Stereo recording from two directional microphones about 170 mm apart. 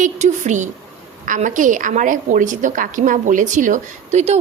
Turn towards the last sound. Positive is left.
turn(degrees=-40)  # may be behind; listen again after turning